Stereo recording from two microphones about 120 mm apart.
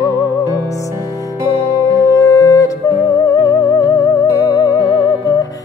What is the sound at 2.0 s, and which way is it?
Music, 30° left (ahead or behind).